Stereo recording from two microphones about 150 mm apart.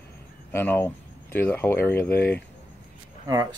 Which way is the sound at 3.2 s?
25° right (ahead or behind).